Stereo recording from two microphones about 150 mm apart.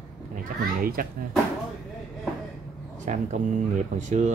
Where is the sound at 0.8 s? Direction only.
75° right (ahead or behind).